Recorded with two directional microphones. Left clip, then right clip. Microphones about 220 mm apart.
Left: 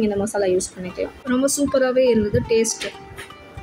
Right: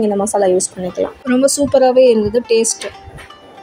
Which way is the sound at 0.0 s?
15° right (ahead or behind).